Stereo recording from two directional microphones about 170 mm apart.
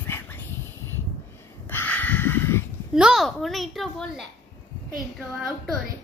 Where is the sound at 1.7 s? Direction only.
10° left (ahead or behind).